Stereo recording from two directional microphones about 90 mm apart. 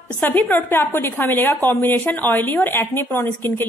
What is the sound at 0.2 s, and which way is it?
A woman's voice, 20° left (ahead or behind).